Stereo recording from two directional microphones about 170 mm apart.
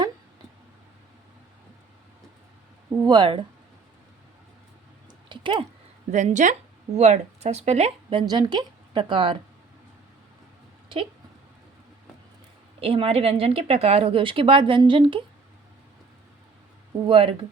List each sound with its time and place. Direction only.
3.0 s a woman's voice: 25° right (ahead or behind)
5.3 s speech: 30° right (ahead or behind)
6.1 s a woman's voice: 45° right (ahead or behind)
8.3 s a woman's voice: 25° right (ahead or behind)
12.8 s a woman's voice: 35° right (ahead or behind)
17.1 s a woman's voice: 30° right (ahead or behind)